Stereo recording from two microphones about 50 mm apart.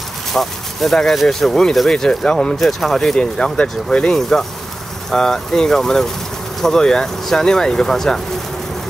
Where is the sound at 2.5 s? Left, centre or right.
Centre.